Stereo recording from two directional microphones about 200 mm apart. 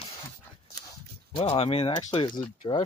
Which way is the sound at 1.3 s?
30° left (ahead or behind).